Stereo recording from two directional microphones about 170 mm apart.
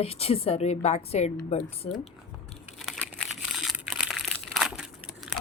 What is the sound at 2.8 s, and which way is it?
Crumpling, centre (ahead or behind).